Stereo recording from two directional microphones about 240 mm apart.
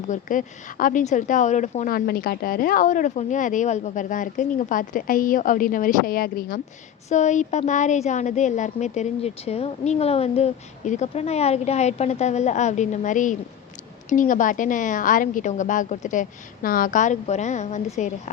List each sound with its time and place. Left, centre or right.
0.1 s a woman's voice: left